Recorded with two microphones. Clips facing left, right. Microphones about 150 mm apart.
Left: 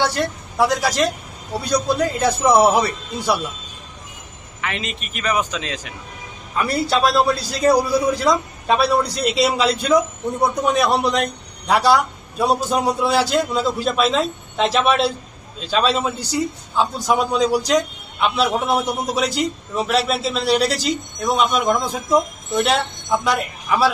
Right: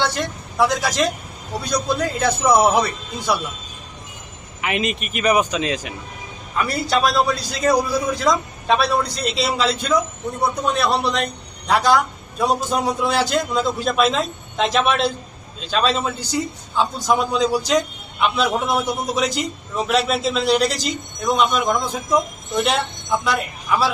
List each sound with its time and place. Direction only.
0.2 s a man's voice: 10° left (ahead or behind)
4.6 s speech: 15° right (ahead or behind)
6.9 s a man's voice: centre (ahead or behind)